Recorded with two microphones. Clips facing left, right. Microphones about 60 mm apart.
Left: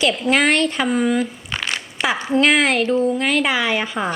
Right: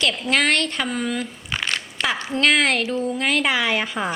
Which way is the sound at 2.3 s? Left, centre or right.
Centre.